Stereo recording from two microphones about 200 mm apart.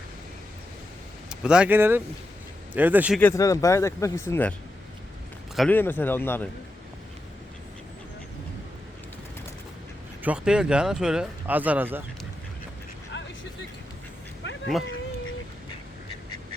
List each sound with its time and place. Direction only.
1.3 s speech: 5° right (ahead or behind)
3.2 s speech: 10° left (ahead or behind)
5.5 s speech: 5° left (ahead or behind)
10.2 s speech: 5° right (ahead or behind)
13.1 s vehicle: 60° left (ahead or behind)